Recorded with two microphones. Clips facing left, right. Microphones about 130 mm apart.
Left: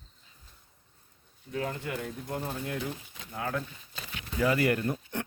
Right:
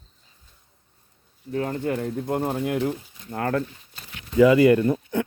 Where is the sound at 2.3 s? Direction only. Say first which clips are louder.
Right 10 dB; 65° right (ahead or behind); by 2.9 s 80° right.